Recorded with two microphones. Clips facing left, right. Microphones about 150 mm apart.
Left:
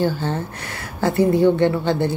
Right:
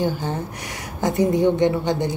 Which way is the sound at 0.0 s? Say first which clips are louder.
Left 2 dB; 15° right (ahead or behind).